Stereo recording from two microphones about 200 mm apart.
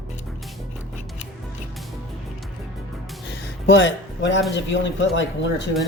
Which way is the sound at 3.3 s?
60° left (ahead or behind).